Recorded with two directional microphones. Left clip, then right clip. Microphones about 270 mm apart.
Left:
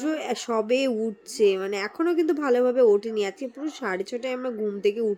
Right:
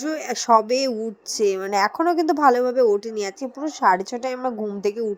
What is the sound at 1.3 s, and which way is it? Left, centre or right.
A woman's voice, centre.